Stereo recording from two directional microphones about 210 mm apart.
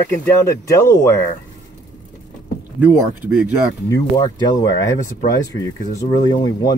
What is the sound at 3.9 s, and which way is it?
Speech, 15° left (ahead or behind).